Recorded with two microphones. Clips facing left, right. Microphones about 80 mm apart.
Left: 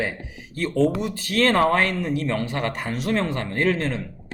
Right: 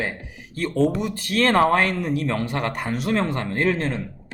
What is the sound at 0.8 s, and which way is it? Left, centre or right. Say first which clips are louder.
Speech: right 1 dB; centre.